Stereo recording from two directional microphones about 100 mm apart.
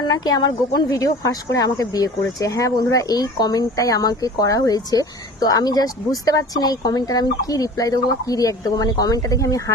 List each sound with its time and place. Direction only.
0.0 s speech: 40° left (ahead or behind)